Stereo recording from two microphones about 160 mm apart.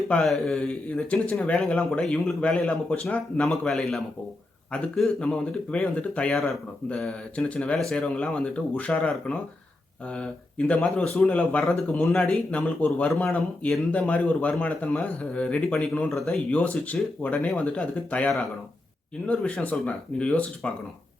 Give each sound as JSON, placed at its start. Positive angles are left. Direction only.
{"t": 0.1, "sound": "speech", "side_deg": 5}
{"t": 10.7, "sound": "a man's voice", "side_deg": 5}